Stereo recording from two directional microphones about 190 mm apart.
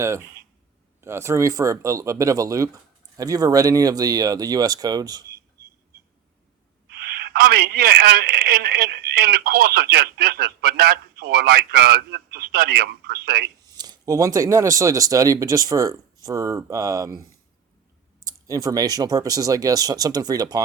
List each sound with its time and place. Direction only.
0.0 s speech: 15° right (ahead or behind)
6.8 s a man's voice: 55° right (ahead or behind)
13.7 s speech: 20° right (ahead or behind)
18.3 s speech: 20° right (ahead or behind)